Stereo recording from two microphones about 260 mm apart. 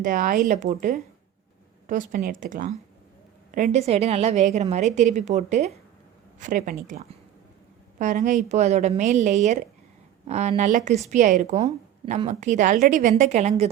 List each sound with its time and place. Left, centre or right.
0.0 s a woman's voice: right